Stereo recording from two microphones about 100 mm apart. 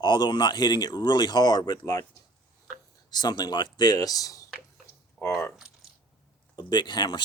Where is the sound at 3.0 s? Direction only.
45° left (ahead or behind).